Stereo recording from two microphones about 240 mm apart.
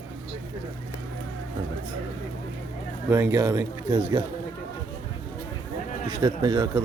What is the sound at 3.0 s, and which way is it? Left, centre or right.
Speech, centre.